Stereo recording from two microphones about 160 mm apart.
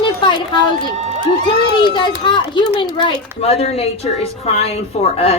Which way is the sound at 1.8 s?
30° left (ahead or behind).